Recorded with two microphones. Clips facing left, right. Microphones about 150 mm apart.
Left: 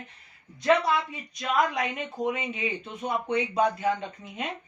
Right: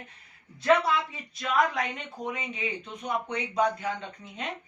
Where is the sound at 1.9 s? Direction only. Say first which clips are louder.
Left 6 dB; 20° left (ahead or behind).